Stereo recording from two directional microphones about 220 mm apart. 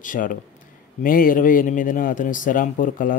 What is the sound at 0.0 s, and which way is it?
Speech, 35° left (ahead or behind).